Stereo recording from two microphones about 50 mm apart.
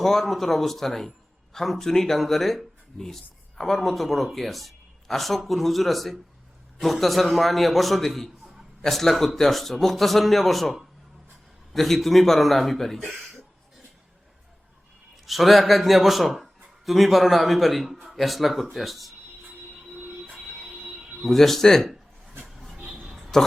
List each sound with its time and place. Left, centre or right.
0.0 s a man's voice: centre
13.1 s a sound: centre
15.1 s a man's voice: centre
20.0 s train wheels squealing: right
20.5 s train wheels squealing: centre
20.7 s music: centre
21.2 s a man's voice: centre
22.4 s vehicle: centre
23.3 s a man's voice: centre